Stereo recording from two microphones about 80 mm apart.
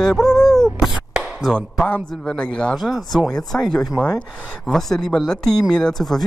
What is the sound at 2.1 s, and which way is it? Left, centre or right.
Speech, centre.